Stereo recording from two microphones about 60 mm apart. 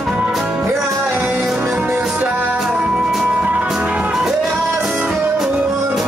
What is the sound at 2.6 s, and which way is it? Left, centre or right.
Music, centre.